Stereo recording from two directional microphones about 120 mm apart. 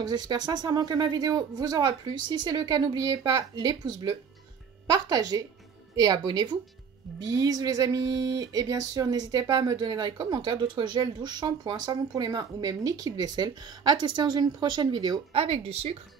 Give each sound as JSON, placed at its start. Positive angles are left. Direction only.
{"t": 0.0, "sound": "speech", "side_deg": -35}
{"t": 15.3, "sound": "speech", "side_deg": -55}